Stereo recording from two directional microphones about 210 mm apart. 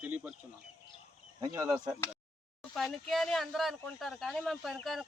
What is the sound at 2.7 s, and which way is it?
A man's voice, centre (ahead or behind).